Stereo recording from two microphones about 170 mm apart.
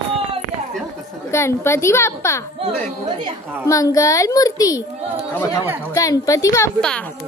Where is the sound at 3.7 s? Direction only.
20° left (ahead or behind).